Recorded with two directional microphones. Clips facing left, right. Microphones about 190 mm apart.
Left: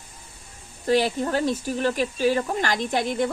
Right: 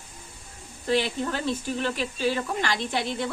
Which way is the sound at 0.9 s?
40° left (ahead or behind).